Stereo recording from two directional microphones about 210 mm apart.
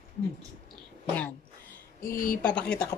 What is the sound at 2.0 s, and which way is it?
Speech, 45° left (ahead or behind).